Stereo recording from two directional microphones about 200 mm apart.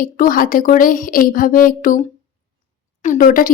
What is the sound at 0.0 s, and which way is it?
A woman's voice, 45° left (ahead or behind).